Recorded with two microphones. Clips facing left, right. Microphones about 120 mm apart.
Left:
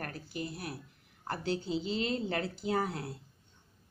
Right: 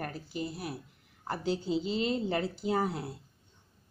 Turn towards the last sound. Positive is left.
turn(degrees=-15)  # may be behind; listen again after turning